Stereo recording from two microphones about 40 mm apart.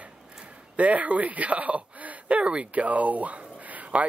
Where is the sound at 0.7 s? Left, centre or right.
Right.